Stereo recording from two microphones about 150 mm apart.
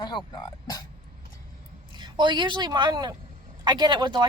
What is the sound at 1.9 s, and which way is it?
Speech, 30° right (ahead or behind).